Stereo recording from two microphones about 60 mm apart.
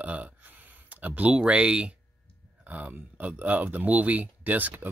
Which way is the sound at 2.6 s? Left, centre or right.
Right.